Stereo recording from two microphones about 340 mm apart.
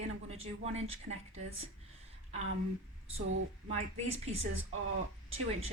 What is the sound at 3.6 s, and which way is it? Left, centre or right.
Speech, centre.